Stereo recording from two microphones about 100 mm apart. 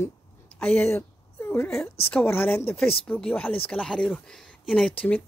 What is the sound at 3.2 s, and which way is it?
Speech, 10° left (ahead or behind).